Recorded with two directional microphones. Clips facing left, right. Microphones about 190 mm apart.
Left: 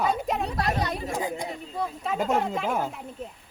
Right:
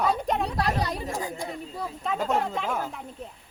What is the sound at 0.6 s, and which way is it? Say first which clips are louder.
Speech: even; 35° right (ahead or behind).